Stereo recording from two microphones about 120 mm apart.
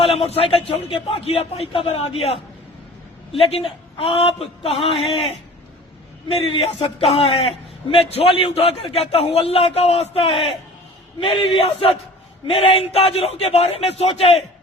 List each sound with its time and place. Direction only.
0.0 s a sound: 55° left (ahead or behind)
0.3 s a man's voice: 50° left (ahead or behind)
6.3 s a man's voice: 55° left (ahead or behind)